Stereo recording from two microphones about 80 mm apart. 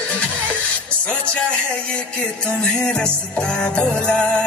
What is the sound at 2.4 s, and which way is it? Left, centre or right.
Music, centre.